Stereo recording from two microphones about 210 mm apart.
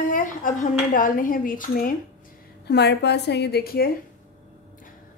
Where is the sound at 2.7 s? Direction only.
50° left (ahead or behind).